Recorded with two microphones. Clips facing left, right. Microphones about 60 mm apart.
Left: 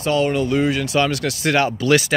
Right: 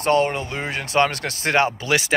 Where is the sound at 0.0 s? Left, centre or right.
Right.